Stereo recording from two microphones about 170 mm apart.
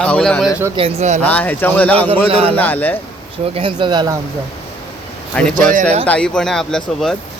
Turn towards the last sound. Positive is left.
turn(degrees=0)  # may be behind; listen again after turning